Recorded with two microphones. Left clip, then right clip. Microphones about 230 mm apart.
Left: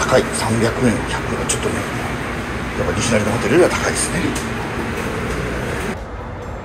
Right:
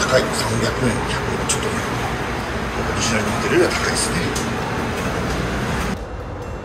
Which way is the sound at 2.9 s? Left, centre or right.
Centre.